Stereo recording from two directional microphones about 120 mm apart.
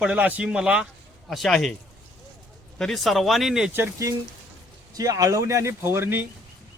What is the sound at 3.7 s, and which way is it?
Speech, 20° right (ahead or behind).